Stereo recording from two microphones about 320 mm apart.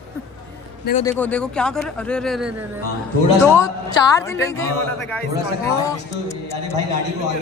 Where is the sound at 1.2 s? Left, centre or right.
Centre.